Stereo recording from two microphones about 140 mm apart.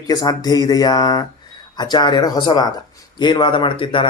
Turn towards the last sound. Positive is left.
turn(degrees=35)  # may be behind; listen again after turning